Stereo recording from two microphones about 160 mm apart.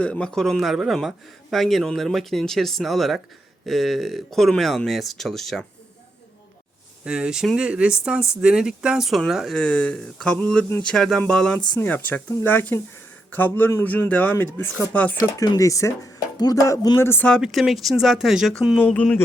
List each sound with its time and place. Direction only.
0.0 s speech: 5° left (ahead or behind)
7.0 s speech: 5° right (ahead or behind)
15.4 s speech: 20° left (ahead or behind)